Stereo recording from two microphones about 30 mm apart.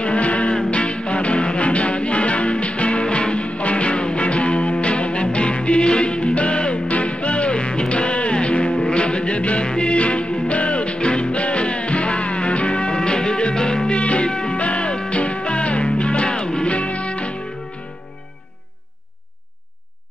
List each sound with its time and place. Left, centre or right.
0.0 s music: left
13.9 s music: left
14.6 s music: left
16.6 s music: left